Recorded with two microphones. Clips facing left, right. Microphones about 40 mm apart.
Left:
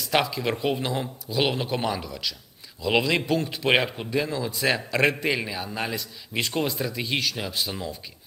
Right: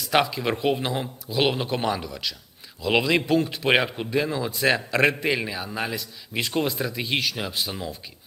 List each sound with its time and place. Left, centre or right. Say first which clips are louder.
0.0 s a man's voice: right 2 dB; centre
4.5 s a man's voice: right 3 dB; centre